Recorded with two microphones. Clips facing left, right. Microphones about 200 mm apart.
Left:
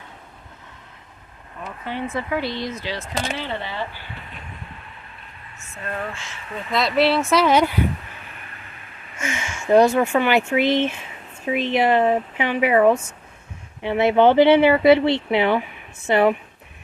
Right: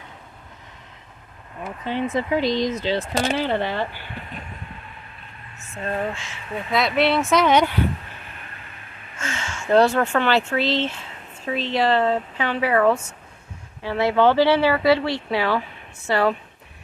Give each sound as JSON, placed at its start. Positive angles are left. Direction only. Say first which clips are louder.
{"t": 1.6, "sound": "speech", "louder": "right 3 dB", "side_deg": -20}
{"t": 3.0, "sound": "speech", "louder": "right 5 dB", "side_deg": -50}
{"t": 5.7, "sound": "speech", "louder": "right 4 dB", "side_deg": -30}
{"t": 6.7, "sound": "speech", "louder": "left 1 dB", "side_deg": 0}
{"t": 9.2, "sound": "speech", "louder": "left 2 dB", "side_deg": 15}